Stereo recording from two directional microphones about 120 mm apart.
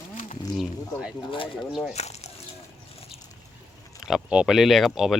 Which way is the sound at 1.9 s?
65° left (ahead or behind).